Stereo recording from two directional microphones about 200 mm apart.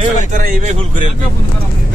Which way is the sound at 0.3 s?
45° right (ahead or behind).